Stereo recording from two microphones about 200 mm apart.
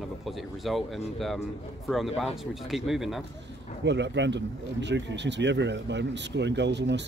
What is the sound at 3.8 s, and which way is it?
Speech, 60° right (ahead or behind).